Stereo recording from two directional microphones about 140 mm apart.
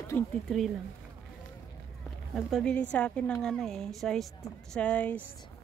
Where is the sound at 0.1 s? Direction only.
15° left (ahead or behind).